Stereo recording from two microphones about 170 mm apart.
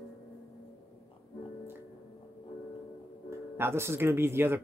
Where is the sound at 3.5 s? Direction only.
15° right (ahead or behind).